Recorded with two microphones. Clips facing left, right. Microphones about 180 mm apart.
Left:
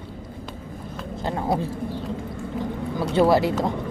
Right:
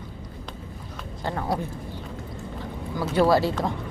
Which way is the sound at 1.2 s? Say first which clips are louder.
Left 3 dB; 20° left (ahead or behind).